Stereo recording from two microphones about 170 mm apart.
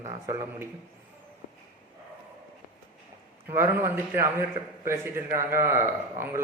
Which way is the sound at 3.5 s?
15° right (ahead or behind).